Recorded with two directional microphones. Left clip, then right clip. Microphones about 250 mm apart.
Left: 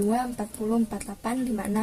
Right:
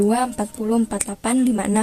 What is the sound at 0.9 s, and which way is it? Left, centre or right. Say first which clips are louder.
Speech: right 8 dB; right.